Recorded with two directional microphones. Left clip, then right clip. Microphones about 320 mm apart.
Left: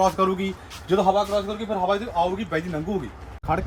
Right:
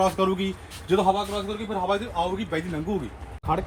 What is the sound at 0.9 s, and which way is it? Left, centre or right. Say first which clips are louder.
Speech: left 2 dB; centre.